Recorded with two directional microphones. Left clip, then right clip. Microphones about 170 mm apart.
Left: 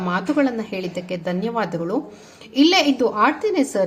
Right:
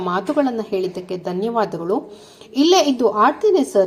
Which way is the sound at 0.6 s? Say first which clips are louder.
Right 5 dB; 35° right (ahead or behind).